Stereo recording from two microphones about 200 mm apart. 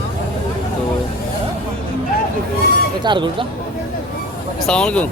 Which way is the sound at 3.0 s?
25° right (ahead or behind).